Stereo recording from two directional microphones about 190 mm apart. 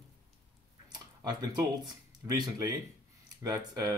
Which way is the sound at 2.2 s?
20° right (ahead or behind).